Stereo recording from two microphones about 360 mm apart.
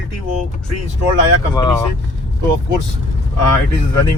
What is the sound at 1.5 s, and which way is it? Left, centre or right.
Speech, centre.